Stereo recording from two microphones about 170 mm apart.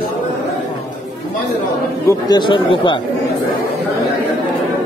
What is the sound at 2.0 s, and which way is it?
Speech, 25° left (ahead or behind).